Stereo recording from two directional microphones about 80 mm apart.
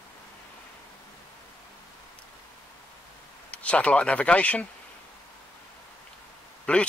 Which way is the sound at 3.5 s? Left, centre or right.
Centre.